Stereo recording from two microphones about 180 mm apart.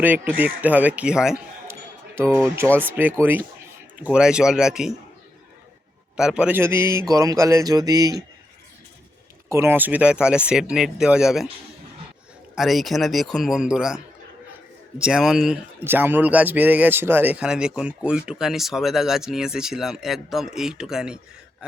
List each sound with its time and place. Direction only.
0.0 s a man's voice: 10° right (ahead or behind)
2.1 s a man's voice: 15° right (ahead or behind)
6.1 s a man's voice: 5° right (ahead or behind); by 8.2 s 20° right (ahead or behind)
9.5 s speech: 15° right (ahead or behind)
12.5 s speech: centre (ahead or behind)